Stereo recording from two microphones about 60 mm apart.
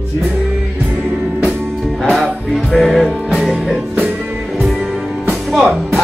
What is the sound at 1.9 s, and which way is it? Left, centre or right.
Music, centre.